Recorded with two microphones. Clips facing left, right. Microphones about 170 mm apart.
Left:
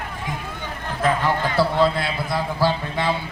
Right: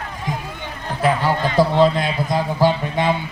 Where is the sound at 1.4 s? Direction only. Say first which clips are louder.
Right 5 dB; 15° right (ahead or behind).